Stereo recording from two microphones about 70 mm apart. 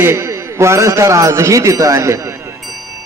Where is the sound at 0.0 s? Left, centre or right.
Right.